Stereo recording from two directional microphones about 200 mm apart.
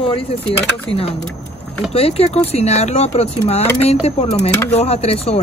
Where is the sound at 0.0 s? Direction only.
30° left (ahead or behind).